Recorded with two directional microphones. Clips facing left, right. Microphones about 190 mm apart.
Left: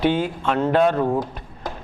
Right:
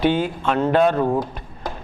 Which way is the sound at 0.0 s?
15° right (ahead or behind).